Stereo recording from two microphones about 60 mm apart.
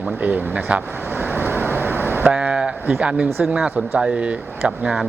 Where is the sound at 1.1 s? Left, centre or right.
Right.